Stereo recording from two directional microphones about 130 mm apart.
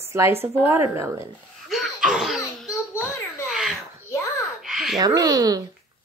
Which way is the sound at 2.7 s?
20° left (ahead or behind).